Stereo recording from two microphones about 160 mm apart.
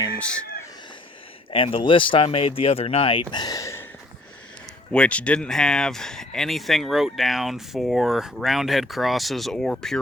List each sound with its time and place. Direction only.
1.5 s speech: 35° left (ahead or behind)
4.9 s speech: 10° left (ahead or behind)